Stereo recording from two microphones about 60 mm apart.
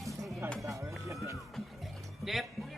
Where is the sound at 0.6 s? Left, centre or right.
Right.